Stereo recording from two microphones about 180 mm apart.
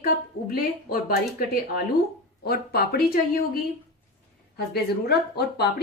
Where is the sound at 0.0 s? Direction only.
55° left (ahead or behind).